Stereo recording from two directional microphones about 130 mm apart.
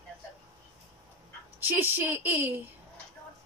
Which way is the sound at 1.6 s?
15° right (ahead or behind).